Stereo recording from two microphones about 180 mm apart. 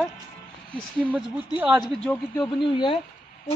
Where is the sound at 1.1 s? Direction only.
5° right (ahead or behind).